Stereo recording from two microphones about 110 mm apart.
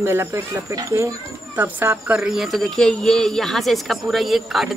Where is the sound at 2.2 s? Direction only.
5° right (ahead or behind).